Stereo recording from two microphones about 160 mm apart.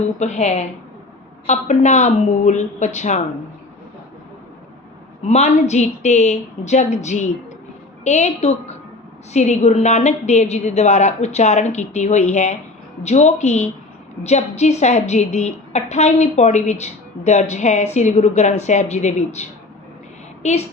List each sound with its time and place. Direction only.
0.2 s a woman's voice: 45° left (ahead or behind)
5.3 s a woman's voice: 45° left (ahead or behind)